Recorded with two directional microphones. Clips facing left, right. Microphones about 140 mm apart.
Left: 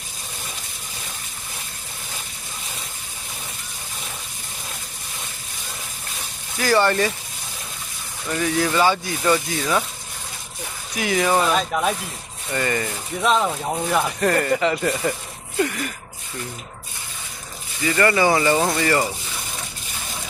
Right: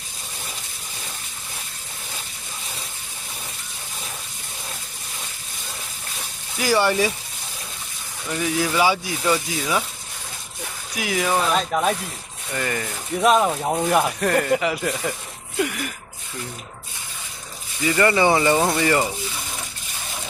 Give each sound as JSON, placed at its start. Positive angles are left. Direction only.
{"t": 6.6, "sound": "speech", "side_deg": -10}
{"t": 8.3, "sound": "speech", "side_deg": -10}
{"t": 10.9, "sound": "speech", "side_deg": -5}
{"t": 13.3, "sound": "speech", "side_deg": -10}
{"t": 14.2, "sound": "speech", "side_deg": 0}
{"t": 15.5, "sound": "a sound", "side_deg": -5}
{"t": 17.8, "sound": "speech", "side_deg": -20}